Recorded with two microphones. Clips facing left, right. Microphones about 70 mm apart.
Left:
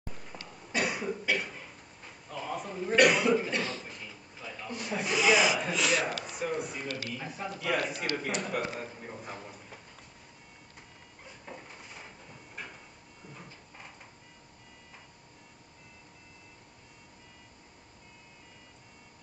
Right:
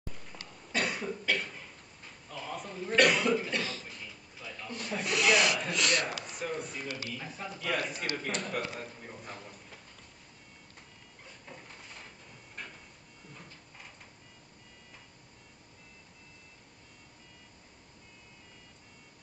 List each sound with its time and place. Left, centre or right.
0.1 s cough: left
0.5 s cough: centre
6.2 s music: centre
7.2 s a man's voice: centre
8.7 s a sound: centre
11.2 s a sound: centre